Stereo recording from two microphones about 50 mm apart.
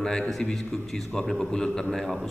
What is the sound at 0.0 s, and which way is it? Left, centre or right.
A man's voice, centre.